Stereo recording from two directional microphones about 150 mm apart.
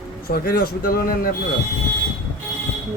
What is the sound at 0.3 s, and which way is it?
Speech, 85° left.